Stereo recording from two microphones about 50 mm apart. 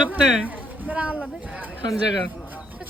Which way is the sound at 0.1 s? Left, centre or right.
Right.